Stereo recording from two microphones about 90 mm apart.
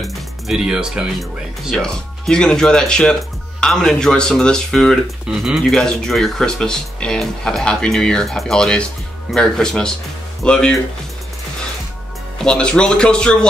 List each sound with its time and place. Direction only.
0.0 s music: 5° right (ahead or behind)
1.7 s speech: 5° left (ahead or behind)
12.4 s speech: 10° left (ahead or behind)